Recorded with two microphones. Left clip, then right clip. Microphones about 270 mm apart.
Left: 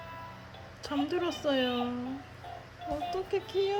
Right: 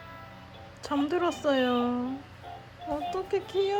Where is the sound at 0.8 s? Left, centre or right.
Centre.